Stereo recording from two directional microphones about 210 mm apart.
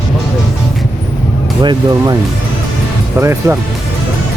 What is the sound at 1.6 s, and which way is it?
Speech, 20° right (ahead or behind).